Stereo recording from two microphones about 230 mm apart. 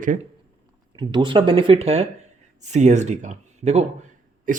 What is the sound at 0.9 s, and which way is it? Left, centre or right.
Speech, centre.